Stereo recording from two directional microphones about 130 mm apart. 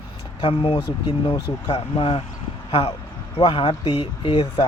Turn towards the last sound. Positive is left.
turn(degrees=35)  # may be behind; listen again after turning